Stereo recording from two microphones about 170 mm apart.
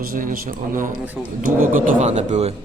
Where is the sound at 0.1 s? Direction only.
55° right (ahead or behind).